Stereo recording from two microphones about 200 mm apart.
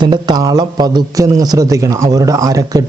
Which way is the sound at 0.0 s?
20° right (ahead or behind).